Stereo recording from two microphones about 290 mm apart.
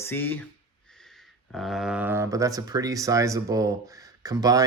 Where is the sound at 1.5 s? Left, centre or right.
Centre.